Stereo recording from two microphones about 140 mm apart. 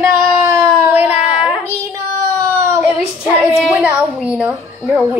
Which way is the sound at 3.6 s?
10° right (ahead or behind).